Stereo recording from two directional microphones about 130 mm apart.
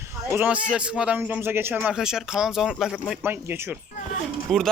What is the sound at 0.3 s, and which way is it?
A man's voice, 10° right (ahead or behind).